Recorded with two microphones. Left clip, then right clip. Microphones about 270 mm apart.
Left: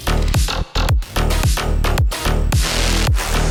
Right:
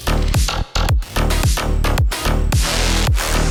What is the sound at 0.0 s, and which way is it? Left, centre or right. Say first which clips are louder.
Music: right 1 dB; centre.